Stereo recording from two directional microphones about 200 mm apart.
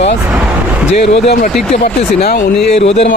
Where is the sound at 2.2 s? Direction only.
40° left (ahead or behind).